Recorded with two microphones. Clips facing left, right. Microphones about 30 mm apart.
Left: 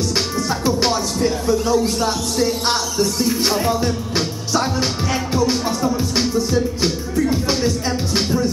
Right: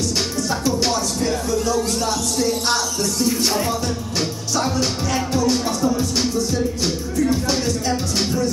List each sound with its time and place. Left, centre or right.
0.4 s music: left